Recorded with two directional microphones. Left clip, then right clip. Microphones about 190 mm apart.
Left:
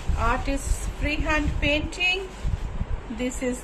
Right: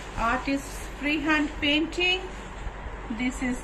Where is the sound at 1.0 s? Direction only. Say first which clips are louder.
Right 1 dB; 70° left (ahead or behind).